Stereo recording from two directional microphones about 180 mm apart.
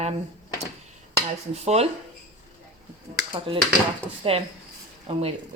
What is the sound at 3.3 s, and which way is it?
A woman's voice, 30° right (ahead or behind).